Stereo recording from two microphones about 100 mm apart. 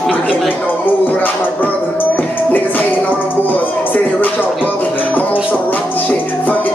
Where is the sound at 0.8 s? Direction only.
15° left (ahead or behind).